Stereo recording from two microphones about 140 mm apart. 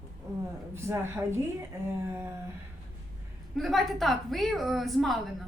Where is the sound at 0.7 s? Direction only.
20° right (ahead or behind).